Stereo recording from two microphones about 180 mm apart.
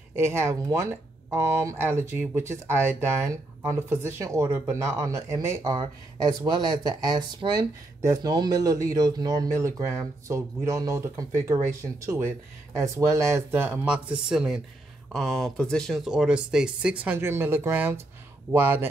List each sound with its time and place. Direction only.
0.1 s speech: 15° right (ahead or behind)